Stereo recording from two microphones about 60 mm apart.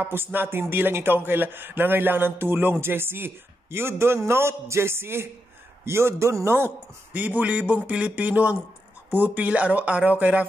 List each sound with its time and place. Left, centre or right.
0.0 s a man's voice: right
7.2 s a man's voice: right